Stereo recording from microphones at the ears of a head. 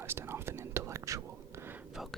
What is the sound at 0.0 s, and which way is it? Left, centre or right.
Whispering, right.